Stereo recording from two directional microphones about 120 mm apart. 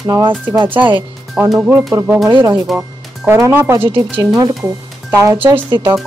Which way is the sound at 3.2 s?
20° right (ahead or behind).